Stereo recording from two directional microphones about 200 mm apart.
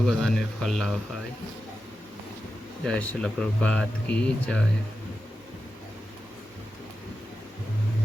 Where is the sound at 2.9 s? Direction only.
5° left (ahead or behind).